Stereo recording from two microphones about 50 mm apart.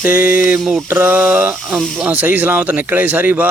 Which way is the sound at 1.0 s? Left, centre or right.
Right.